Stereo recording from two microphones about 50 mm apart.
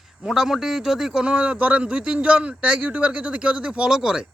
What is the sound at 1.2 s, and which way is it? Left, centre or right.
Speech, right.